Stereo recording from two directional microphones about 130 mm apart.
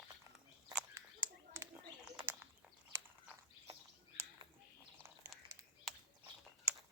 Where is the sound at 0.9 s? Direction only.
20° right (ahead or behind).